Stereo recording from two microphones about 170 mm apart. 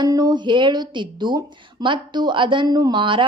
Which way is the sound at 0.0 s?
25° right (ahead or behind).